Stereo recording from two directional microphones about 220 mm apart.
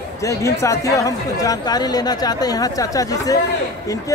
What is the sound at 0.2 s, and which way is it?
Speech, 15° left (ahead or behind).